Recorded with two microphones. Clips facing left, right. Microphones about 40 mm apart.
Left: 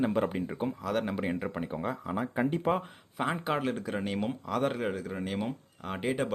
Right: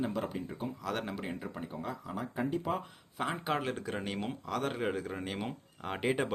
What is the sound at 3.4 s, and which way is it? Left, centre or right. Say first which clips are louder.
Speech: left 3 dB; centre.